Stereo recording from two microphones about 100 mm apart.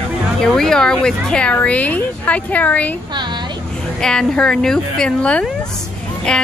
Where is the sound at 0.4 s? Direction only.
5° left (ahead or behind).